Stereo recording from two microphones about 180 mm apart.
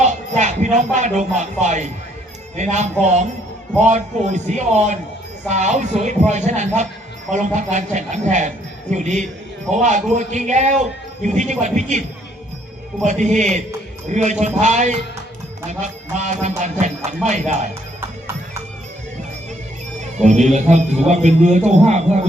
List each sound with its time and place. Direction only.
0.0 s speech: 40° right (ahead or behind)
20.1 s speech: 40° right (ahead or behind)